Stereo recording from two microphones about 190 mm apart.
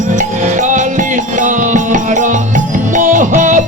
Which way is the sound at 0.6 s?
40° right (ahead or behind).